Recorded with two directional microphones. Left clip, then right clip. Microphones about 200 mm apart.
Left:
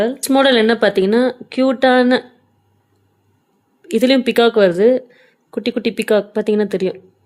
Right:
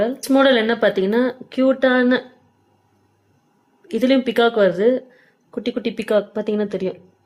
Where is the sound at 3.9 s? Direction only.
45° left (ahead or behind).